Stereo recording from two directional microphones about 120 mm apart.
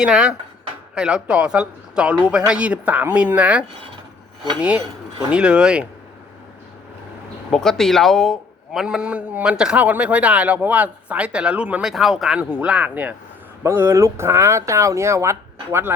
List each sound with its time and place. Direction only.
0.0 s a man's voice: 5° right (ahead or behind)
5.3 s a man's voice: 10° right (ahead or behind)
7.5 s a man's voice: 5° left (ahead or behind); by 16.0 s 20° right (ahead or behind)